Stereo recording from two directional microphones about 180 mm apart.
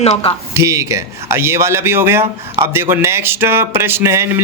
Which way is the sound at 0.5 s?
15° right (ahead or behind).